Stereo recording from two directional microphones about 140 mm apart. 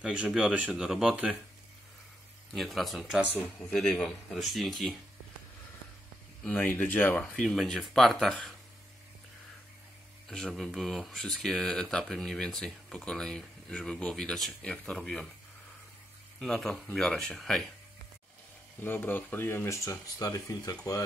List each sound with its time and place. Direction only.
0.0 s speech: 5° right (ahead or behind)
2.5 s speech: centre (ahead or behind)
6.4 s speech: 10° left (ahead or behind)
7.4 s speech: centre (ahead or behind)
10.2 s speech: 5° left (ahead or behind)
16.3 s speech: centre (ahead or behind)
18.8 s speech: 15° left (ahead or behind)